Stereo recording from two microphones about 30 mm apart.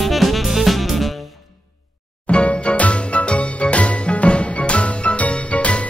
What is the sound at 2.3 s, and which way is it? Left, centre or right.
Music, left.